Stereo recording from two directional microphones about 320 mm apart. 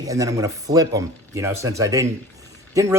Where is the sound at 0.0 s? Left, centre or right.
Centre.